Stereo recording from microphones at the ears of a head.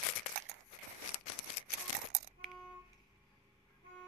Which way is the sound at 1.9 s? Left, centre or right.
Right.